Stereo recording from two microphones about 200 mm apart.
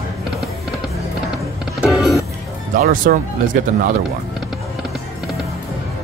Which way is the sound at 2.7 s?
45° right (ahead or behind).